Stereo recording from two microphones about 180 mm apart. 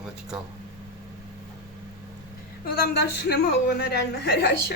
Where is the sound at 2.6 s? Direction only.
60° left (ahead or behind).